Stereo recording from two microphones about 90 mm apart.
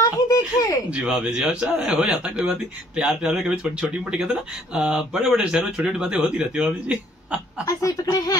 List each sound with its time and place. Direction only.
0.0 s a sound: 40° left (ahead or behind)
0.8 s speech: 10° right (ahead or behind)
7.6 s speech: 40° left (ahead or behind)